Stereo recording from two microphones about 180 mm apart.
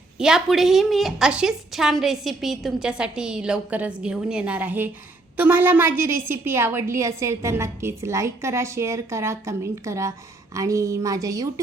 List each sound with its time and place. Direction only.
0.2 s a woman's voice: 5° right (ahead or behind); by 11.6 s 20° right (ahead or behind)